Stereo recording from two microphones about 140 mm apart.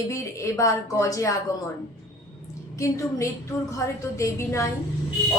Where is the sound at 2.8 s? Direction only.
20° left (ahead or behind).